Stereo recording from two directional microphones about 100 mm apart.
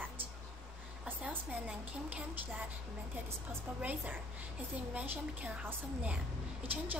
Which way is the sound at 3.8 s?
15° right (ahead or behind).